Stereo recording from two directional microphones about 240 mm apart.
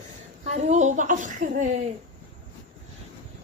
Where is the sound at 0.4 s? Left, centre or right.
Right.